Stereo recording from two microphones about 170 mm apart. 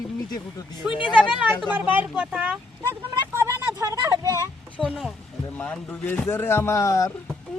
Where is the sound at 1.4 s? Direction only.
10° right (ahead or behind).